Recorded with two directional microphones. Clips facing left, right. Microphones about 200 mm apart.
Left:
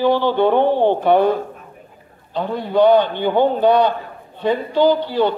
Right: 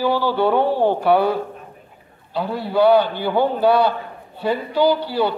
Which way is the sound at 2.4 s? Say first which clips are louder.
Left 2 dB; 10° right (ahead or behind).